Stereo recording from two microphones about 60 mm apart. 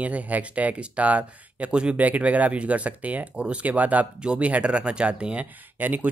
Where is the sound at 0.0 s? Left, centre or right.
Right.